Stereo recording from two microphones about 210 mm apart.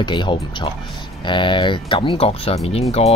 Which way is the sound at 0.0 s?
20° left (ahead or behind).